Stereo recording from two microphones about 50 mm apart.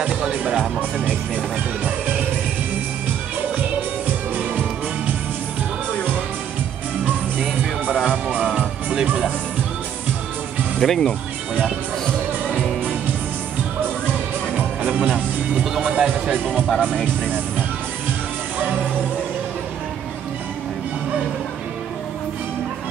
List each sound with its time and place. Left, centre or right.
0.0 s speech: right
7.1 s music: right
10.8 s speech: centre
12.4 s music: centre
14.5 s music: centre
15.8 s speech: centre
16.4 s speech: centre